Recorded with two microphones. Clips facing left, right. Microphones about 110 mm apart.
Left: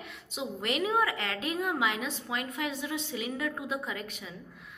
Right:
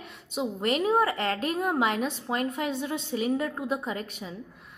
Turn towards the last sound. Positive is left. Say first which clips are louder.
# right 5 dB
turn(degrees=-40)  # may be behind; listen again after turning